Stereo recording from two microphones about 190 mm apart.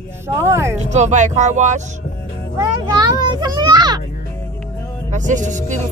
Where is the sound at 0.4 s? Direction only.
15° right (ahead or behind).